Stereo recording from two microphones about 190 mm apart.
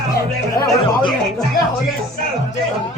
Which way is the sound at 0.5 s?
25° left (ahead or behind).